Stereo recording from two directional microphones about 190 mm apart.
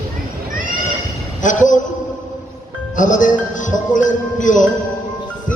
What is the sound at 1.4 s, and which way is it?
Speech, 40° left (ahead or behind).